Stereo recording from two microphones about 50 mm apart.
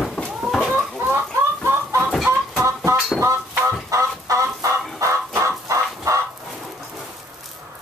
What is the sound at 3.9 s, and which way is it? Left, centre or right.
Chicken, right.